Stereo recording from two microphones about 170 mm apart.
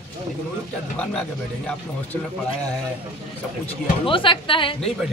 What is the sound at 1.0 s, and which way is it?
Speech, 5° left (ahead or behind).